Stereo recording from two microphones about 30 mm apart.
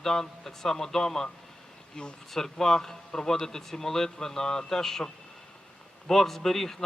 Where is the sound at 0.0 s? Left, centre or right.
Centre.